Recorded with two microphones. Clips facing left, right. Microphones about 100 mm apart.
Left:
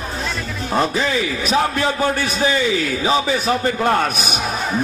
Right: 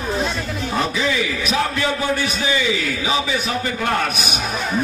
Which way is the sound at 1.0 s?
35° left (ahead or behind).